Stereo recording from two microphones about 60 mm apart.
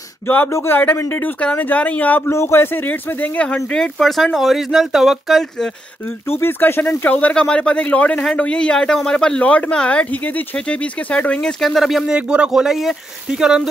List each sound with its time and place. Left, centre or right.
0.5 s a man's voice: left
1.4 s speech: left
2.2 s a man's voice: left
3.7 s speech: centre
6.0 s a man's voice: left
7.1 s speech: left
11.6 s speech: centre
12.1 s speech: centre